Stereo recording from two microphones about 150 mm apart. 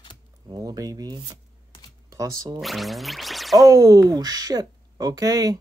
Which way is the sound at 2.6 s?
Centre (ahead or behind).